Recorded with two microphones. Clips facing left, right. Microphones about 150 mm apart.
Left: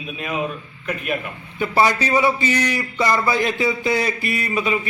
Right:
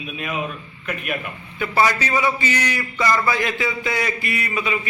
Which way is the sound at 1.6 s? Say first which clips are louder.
Left 2 dB; 25° left (ahead or behind).